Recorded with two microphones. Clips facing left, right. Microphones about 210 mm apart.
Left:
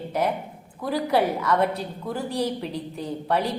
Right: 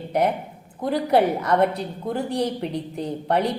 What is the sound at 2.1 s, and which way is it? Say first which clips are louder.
A woman's voice: right 2 dB; 60° right (ahead or behind).